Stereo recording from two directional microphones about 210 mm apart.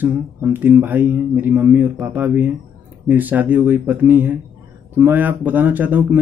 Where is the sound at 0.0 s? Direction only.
10° right (ahead or behind).